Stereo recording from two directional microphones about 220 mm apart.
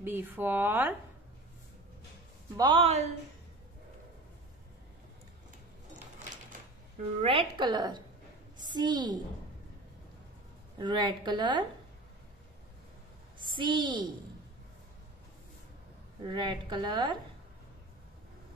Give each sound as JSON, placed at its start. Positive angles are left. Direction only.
{"t": 0.0, "sound": "speech", "side_deg": -10}
{"t": 2.5, "sound": "a woman's voice", "side_deg": -20}
{"t": 7.2, "sound": "a woman's voice", "side_deg": -25}
{"t": 10.8, "sound": "a woman's voice", "side_deg": -20}
{"t": 13.5, "sound": "a woman's voice", "side_deg": -20}
{"t": 16.3, "sound": "a woman's voice", "side_deg": -20}